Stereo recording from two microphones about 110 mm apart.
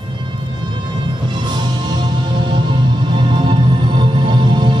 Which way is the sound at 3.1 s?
45° right (ahead or behind).